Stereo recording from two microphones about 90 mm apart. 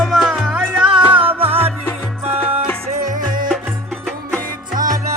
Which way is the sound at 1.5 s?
90° right.